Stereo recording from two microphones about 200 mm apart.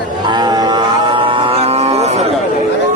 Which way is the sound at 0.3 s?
20° right (ahead or behind).